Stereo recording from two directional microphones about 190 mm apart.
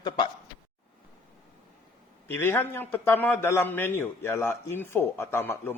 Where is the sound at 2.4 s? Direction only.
10° left (ahead or behind).